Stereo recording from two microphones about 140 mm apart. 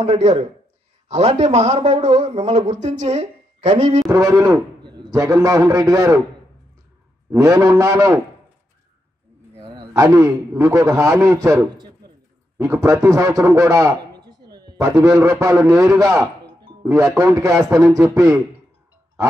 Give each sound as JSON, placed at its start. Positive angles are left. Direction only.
{"t": 0.0, "sound": "a man's voice", "side_deg": -55}
{"t": 4.1, "sound": "a man's voice", "side_deg": -20}
{"t": 7.2, "sound": "a man's voice", "side_deg": -25}
{"t": 9.9, "sound": "a man's voice", "side_deg": -25}